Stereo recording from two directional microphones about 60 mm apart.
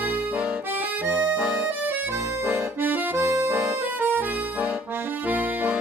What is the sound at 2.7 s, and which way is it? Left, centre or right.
Accordion, right.